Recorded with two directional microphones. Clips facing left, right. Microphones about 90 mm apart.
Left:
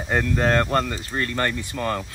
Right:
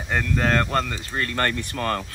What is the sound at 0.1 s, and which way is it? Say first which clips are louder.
Speech: left 2 dB; 25° left (ahead or behind).